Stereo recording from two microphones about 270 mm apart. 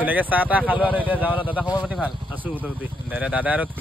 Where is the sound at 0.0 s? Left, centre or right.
Centre.